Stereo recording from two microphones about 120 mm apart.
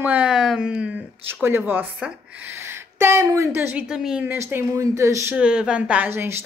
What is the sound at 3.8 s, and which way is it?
Speech, 5° right (ahead or behind).